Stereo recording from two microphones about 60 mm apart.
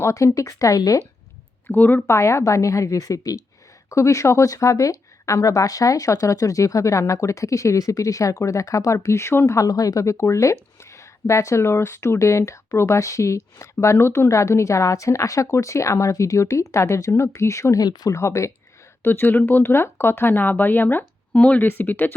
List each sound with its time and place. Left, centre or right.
0.0 s a woman's voice: left
1.6 s speech: left
2.0 s a woman's voice: left
3.8 s a woman's voice: left
9.6 s a woman's voice: left
18.1 s speech: left
19.0 s speech: left
21.3 s speech: left
21.7 s speech: left